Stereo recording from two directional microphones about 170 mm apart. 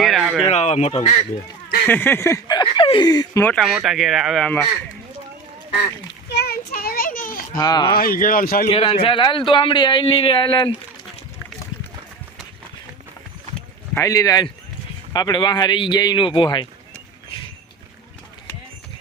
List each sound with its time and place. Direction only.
0.0 s a sound: centre (ahead or behind)
0.4 s speech: 40° left (ahead or behind)
1.9 s speech: 15° left (ahead or behind)
3.5 s speech: centre (ahead or behind)
6.2 s children playing: 75° left (ahead or behind); by 7.4 s 55° left (ahead or behind)
7.5 s speech: 20° left (ahead or behind)
7.9 s speech: 60° left (ahead or behind)
8.6 s speech: 35° left (ahead or behind)
13.9 s speech: 20° left (ahead or behind)